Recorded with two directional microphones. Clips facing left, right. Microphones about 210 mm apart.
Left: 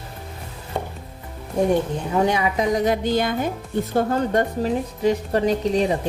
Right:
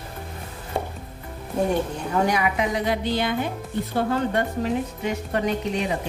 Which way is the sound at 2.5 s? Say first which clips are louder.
Left 4 dB; 40° left (ahead or behind).